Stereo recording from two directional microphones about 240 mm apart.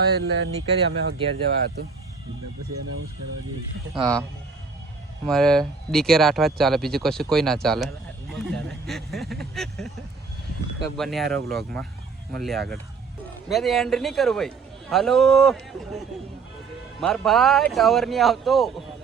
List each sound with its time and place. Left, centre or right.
0.2 s speech: right
3.9 s speech: centre
5.2 s speech: centre
10.9 s speech: centre
17.0 s speech: centre